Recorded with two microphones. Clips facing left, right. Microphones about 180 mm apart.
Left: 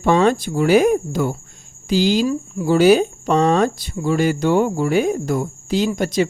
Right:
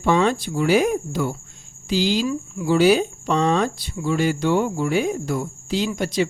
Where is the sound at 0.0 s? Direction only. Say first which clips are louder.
Left 3 dB; 45° left (ahead or behind).